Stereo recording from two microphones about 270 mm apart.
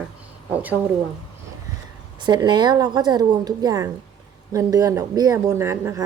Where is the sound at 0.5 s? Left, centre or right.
Centre.